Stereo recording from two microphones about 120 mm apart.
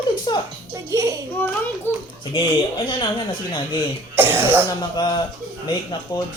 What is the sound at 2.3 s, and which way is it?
Speech, 45° left (ahead or behind).